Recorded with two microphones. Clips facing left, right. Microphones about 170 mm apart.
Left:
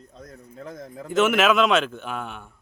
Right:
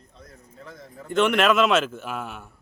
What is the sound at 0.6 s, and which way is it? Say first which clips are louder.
Speech: left 6 dB; 40° left (ahead or behind).